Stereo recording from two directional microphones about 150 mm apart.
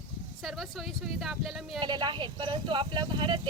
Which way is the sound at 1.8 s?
30° right (ahead or behind).